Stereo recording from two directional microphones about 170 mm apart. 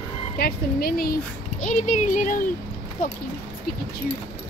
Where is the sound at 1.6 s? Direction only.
45° left (ahead or behind).